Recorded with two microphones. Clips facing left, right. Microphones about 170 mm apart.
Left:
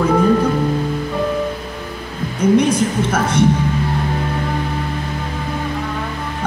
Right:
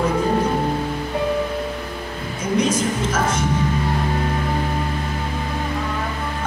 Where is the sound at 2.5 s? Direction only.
60° left (ahead or behind).